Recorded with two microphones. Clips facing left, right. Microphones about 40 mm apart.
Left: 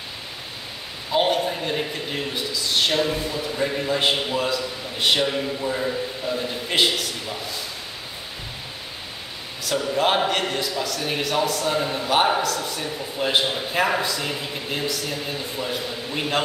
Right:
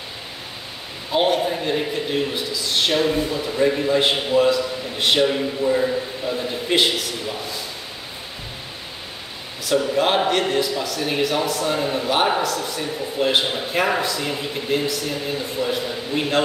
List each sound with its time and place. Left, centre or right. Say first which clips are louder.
1.1 s a man's voice: right 2 dB; centre
9.7 s a man's voice: right 2 dB; centre